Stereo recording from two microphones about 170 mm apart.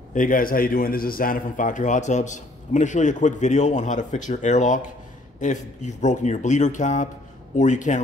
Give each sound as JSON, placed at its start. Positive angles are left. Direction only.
{"t": 0.1, "sound": "a man's voice", "side_deg": 50}